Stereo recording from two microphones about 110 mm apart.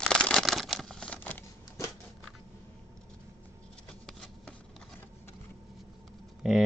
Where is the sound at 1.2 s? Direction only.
15° left (ahead or behind).